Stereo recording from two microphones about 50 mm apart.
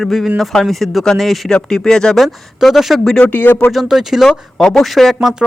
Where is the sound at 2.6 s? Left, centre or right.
Centre.